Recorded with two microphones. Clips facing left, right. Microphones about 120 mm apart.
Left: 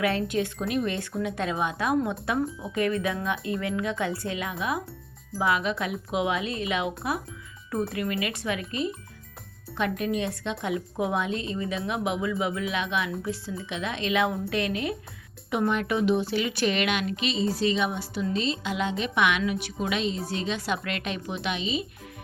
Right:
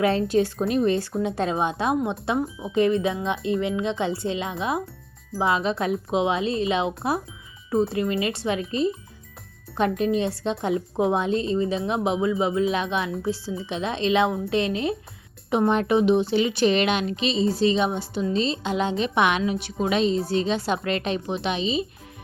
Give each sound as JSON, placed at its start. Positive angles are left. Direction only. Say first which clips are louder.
{"t": 0.0, "sound": "a woman's voice", "louder": "right 5 dB", "side_deg": -30}
{"t": 10.0, "sound": "a woman's voice", "louder": "right 5 dB", "side_deg": -30}